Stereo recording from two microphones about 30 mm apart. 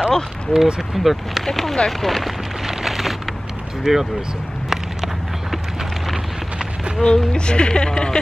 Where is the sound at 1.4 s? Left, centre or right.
Centre.